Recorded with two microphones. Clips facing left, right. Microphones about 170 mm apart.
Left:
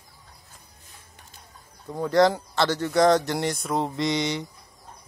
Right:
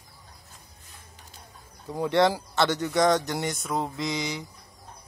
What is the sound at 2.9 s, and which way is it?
Speech, centre (ahead or behind).